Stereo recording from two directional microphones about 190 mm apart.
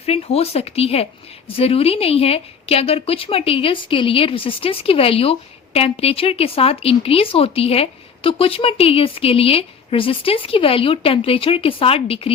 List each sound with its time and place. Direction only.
0.0 s a woman's voice: 35° left (ahead or behind)